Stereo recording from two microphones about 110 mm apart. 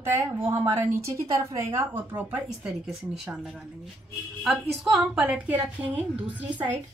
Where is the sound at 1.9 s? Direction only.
15° right (ahead or behind).